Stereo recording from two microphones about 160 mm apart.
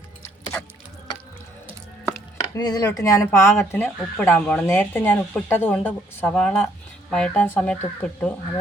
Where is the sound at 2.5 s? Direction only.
25° left (ahead or behind).